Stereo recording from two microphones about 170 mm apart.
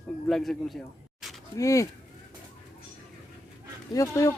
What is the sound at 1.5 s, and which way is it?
Speech, 20° left (ahead or behind).